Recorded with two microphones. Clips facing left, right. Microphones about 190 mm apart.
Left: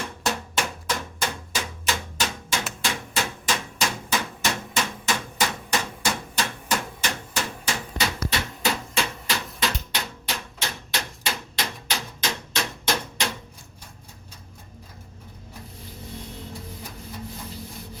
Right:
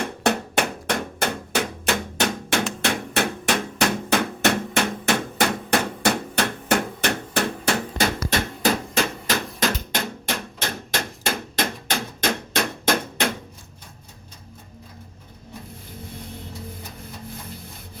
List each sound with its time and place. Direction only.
0.0 s hammer: 60° right (ahead or behind)